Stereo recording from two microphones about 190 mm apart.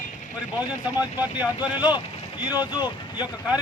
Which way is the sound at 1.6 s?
20° left (ahead or behind).